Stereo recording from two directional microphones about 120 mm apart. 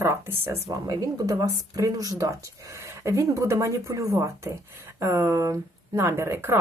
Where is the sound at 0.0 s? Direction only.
20° right (ahead or behind).